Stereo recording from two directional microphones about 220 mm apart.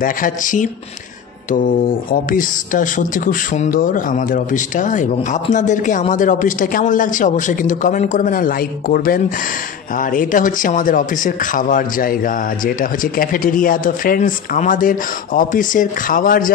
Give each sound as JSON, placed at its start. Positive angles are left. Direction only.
{"t": 0.0, "sound": "speech", "side_deg": 35}